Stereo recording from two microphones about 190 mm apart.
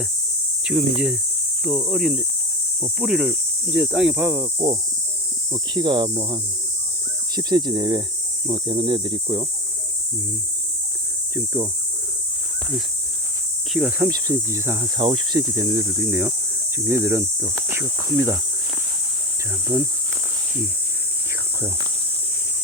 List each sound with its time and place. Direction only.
0.7 s speech: 5° right (ahead or behind); by 9.5 s 20° right (ahead or behind)
11.3 s speech: 10° right (ahead or behind)
13.7 s speech: 5° right (ahead or behind)